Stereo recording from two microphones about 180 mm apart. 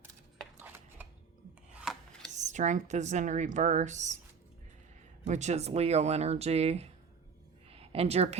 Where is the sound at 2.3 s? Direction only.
40° right (ahead or behind).